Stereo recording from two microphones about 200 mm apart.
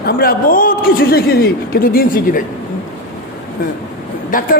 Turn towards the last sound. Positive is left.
turn(degrees=40)  # may be behind; listen again after turning